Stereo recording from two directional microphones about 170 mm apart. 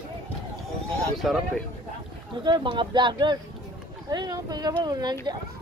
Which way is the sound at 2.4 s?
25° right (ahead or behind).